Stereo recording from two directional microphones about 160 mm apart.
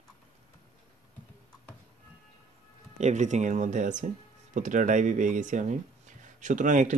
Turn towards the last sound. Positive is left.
turn(degrees=-50)  # may be behind; listen again after turning